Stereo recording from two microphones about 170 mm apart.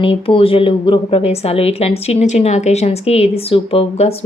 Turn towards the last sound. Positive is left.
turn(degrees=35)  # may be behind; listen again after turning